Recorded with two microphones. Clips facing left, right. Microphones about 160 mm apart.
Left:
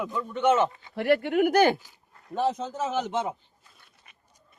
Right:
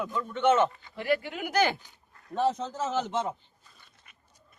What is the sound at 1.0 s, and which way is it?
Speech, 65° left (ahead or behind).